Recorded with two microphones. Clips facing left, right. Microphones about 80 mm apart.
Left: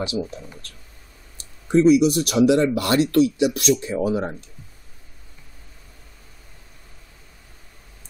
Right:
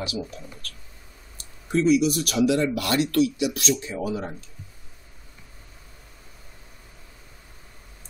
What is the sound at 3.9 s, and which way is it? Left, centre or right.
Speech, left.